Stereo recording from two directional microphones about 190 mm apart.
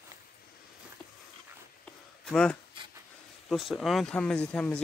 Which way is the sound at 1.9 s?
5° left (ahead or behind).